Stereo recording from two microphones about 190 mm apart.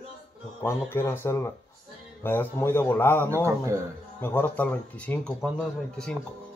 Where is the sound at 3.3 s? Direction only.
15° right (ahead or behind).